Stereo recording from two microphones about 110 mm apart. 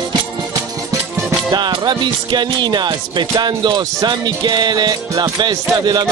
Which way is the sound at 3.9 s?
40° right (ahead or behind).